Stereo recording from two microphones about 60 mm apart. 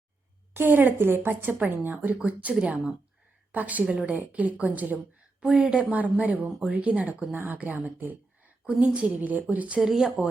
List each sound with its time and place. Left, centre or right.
0.5 s a woman's voice: right
5.4 s a woman's voice: centre
8.8 s speech: centre
9.8 s speech: centre